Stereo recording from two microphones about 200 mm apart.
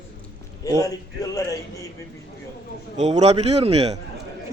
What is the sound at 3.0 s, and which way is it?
A man's voice, 35° right (ahead or behind).